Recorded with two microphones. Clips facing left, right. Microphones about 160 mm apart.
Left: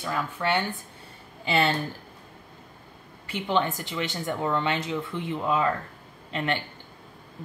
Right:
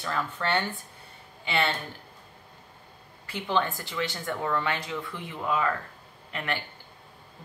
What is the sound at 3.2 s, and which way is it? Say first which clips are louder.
A man's voice: left 2 dB; 20° left (ahead or behind).